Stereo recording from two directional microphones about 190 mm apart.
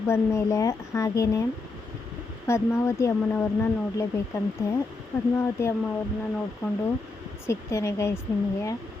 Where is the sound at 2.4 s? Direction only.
15° left (ahead or behind).